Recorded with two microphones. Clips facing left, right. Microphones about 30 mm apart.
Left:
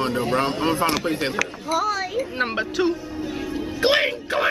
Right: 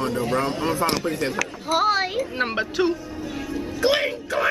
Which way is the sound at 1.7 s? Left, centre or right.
Right.